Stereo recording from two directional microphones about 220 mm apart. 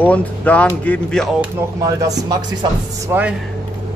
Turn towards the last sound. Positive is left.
turn(degrees=-10)  # may be behind; listen again after turning